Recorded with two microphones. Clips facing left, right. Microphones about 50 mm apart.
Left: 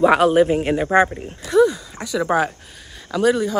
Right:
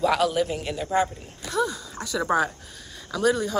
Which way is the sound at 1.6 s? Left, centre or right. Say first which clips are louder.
Left 10 dB; left.